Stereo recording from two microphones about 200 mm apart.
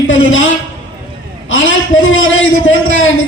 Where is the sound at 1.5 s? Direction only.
75° left (ahead or behind).